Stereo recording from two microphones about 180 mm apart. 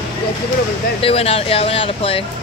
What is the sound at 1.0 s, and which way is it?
Speech, 35° left (ahead or behind).